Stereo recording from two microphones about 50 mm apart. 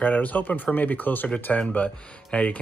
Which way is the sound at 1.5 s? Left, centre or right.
Left.